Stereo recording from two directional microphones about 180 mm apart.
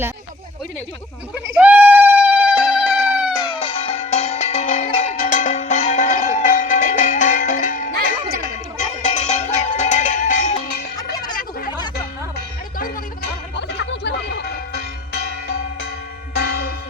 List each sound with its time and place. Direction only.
1.5 s a sound: 10° right (ahead or behind)
3.3 s music: 25° left (ahead or behind); by 10.6 s 40° left (ahead or behind)
10.9 s music: 20° left (ahead or behind)
13.6 s music: 75° left (ahead or behind)
16.3 s church bell: 70° left (ahead or behind)